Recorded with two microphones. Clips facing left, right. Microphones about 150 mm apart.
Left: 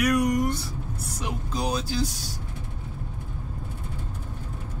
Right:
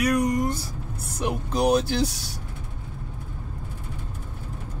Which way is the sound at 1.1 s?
60° right (ahead or behind).